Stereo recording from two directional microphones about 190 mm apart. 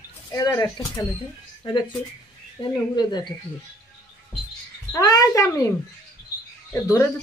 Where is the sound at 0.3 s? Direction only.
15° left (ahead or behind).